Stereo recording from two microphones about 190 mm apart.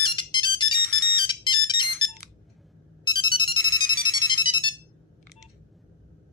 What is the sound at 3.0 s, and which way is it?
Music, 25° left (ahead or behind).